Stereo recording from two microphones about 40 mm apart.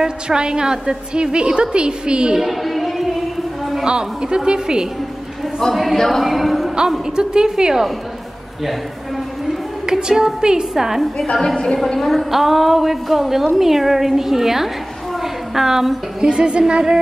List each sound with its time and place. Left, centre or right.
0.0 s a woman's voice: centre
2.3 s a sound: centre
3.8 s a woman's voice: right
5.4 s a sound: centre
5.9 s music: centre
7.1 s a woman's voice: centre
8.6 s music: centre
9.8 s a woman's voice: centre
11.4 s a woman's voice: centre
11.9 s a woman's voice: centre
15.1 s a sound: centre
16.2 s a woman's voice: right